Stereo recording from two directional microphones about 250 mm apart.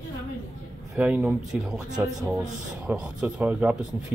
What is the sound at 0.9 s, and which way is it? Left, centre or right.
Speech, centre.